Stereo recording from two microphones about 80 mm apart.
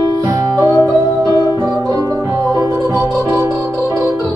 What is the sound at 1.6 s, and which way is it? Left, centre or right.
Music, right.